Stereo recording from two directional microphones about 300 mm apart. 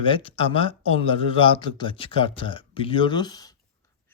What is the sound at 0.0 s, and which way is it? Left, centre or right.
Speech, centre.